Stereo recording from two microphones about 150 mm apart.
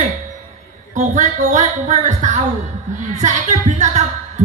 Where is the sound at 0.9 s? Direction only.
55° right (ahead or behind).